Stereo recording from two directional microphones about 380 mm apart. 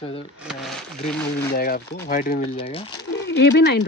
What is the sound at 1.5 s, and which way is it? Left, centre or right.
Speech, left.